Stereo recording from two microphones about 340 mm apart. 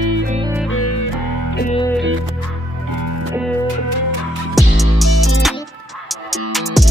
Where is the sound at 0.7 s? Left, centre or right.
Left.